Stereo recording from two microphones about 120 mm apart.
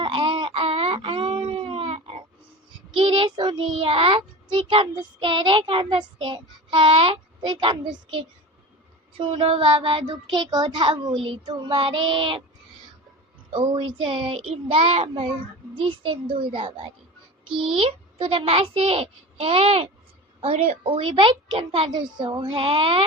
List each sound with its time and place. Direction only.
0.0 s baby cry: 45° right (ahead or behind)
2.9 s child singing: 45° right (ahead or behind)
9.1 s speech: 45° right (ahead or behind)
13.5 s speech: 40° right (ahead or behind)